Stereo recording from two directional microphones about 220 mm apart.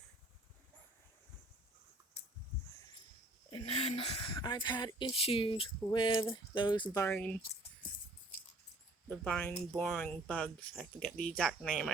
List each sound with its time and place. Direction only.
3.5 s speech: 25° left (ahead or behind); by 7.9 s 5° left (ahead or behind)
9.0 s speech: 5° left (ahead or behind)